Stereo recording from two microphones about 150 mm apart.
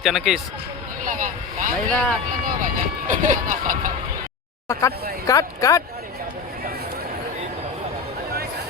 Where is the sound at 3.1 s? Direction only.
60° right (ahead or behind).